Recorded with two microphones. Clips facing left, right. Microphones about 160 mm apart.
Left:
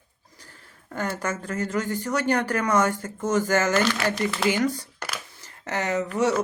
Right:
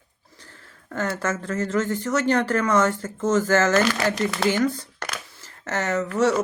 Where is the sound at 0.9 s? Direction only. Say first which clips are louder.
Right 3 dB; 15° left (ahead or behind).